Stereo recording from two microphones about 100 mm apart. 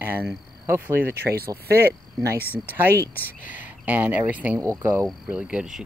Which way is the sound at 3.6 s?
15° right (ahead or behind).